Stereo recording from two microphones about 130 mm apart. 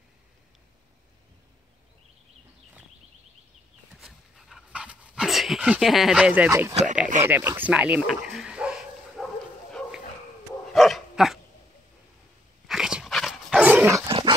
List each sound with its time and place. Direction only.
3.9 s dog: 5° right (ahead or behind)
6.7 s speech: 60° right (ahead or behind)
7.2 s bow-wow: 15° right (ahead or behind); by 10.0 s centre (ahead or behind)
10.7 s dog: centre (ahead or behind)
12.6 s dog: 5° right (ahead or behind)
14.0 s dog: 40° right (ahead or behind)